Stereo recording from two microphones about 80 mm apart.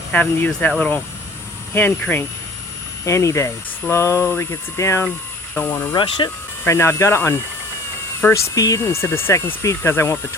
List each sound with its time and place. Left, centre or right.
0.1 s speech: centre
3.0 s speech: left
5.5 s speech: left
8.3 s speech: left
8.8 s speech: left